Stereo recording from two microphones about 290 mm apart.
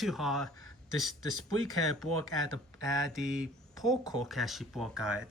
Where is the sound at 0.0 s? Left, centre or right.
Centre.